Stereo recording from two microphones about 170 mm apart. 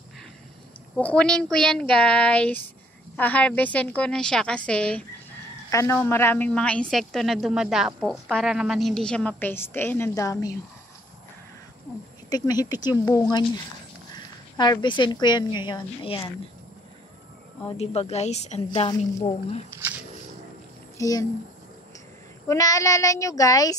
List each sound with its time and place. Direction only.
0.9 s a woman's voice: 5° left (ahead or behind)
5.7 s a man's voice: 15° left (ahead or behind)
12.3 s speech: 25° left (ahead or behind)
17.6 s a woman's voice: 40° left (ahead or behind)
18.7 s speech: 25° left (ahead or behind)
21.0 s speech: 20° left (ahead or behind)
22.5 s speech: 20° left (ahead or behind)